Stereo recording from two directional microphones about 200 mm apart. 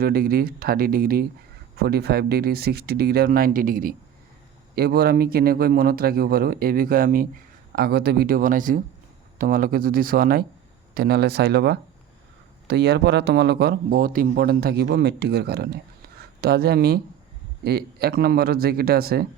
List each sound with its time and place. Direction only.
0.0 s a man's voice: 50° right (ahead or behind)